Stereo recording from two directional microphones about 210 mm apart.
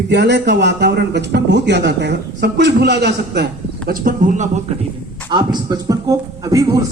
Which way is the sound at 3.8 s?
40° right (ahead or behind).